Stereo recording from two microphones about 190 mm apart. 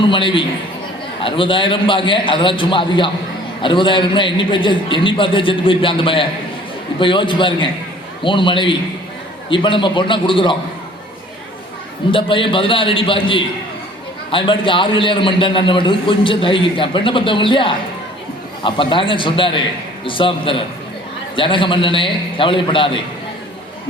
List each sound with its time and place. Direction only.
0.1 s a man's voice: 25° left (ahead or behind)
12.1 s a man's voice: 25° left (ahead or behind)